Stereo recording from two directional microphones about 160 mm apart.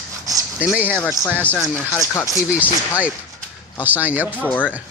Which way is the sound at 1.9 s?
20° left (ahead or behind).